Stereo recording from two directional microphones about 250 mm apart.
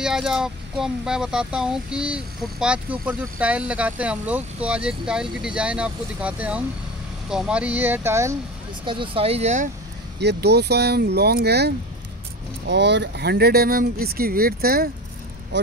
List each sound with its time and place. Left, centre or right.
0.0 s speech: centre; by 9.7 s right
10.2 s speech: right